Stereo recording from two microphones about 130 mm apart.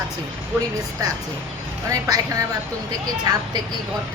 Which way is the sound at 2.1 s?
25° right (ahead or behind).